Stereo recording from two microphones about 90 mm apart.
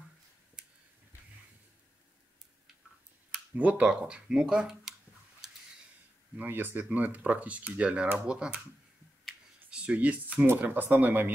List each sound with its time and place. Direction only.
0.6 s a sound: 10° right (ahead or behind)
3.5 s speech: 15° right (ahead or behind)
6.3 s speech: 20° right (ahead or behind)
9.7 s speech: 10° right (ahead or behind)